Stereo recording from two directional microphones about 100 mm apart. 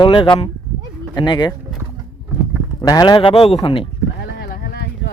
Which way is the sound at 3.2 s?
65° left (ahead or behind).